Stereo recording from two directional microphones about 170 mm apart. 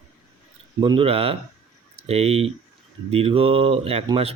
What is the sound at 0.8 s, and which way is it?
Speech, 30° right (ahead or behind).